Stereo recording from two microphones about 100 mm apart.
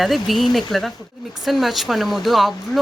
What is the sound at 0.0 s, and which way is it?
Speech, centre (ahead or behind).